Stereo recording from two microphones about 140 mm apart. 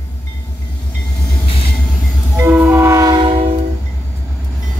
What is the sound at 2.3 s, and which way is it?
Train, 15° right (ahead or behind).